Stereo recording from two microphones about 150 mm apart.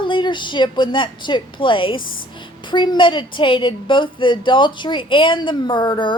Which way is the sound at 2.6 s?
30° left (ahead or behind).